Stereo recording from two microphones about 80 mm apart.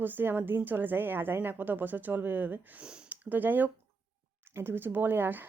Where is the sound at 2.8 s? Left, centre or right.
Centre.